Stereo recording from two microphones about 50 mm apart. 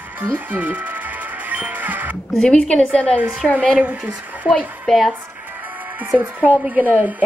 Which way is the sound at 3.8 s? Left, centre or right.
Right.